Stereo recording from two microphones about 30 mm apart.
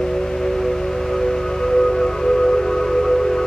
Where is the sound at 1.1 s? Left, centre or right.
Centre.